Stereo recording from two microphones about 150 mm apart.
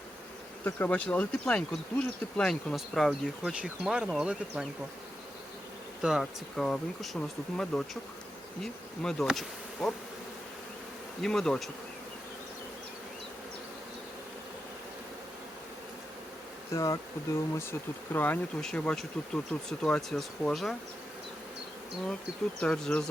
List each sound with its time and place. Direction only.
0.6 s speech: 10° left (ahead or behind); by 4.6 s 5° right (ahead or behind)
6.0 s speech: 5° right (ahead or behind)
8.6 s bee: 5° left (ahead or behind)
11.2 s speech: 5° left (ahead or behind)
16.7 s speech: 20° left (ahead or behind); by 20.7 s centre (ahead or behind)
22.6 s speech: 5° left (ahead or behind)